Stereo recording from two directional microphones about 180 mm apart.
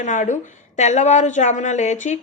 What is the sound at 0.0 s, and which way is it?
A woman's voice, 40° left (ahead or behind).